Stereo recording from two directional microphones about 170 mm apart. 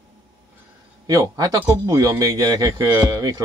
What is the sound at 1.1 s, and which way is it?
Speech, 20° right (ahead or behind).